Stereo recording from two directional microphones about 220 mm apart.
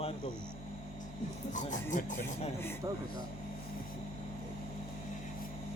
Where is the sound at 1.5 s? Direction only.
35° left (ahead or behind).